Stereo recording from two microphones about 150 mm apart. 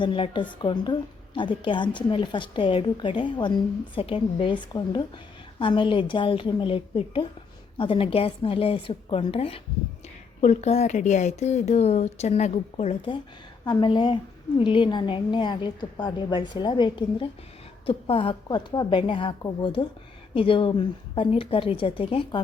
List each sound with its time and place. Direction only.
0.0 s a woman's voice: 30° left (ahead or behind)
13.7 s a woman's voice: 30° left (ahead or behind)